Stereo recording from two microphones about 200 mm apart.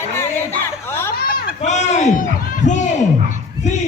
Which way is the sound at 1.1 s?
50° left (ahead or behind).